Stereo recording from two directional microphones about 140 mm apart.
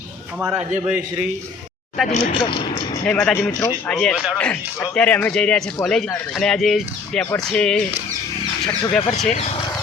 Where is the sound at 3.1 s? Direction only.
10° left (ahead or behind).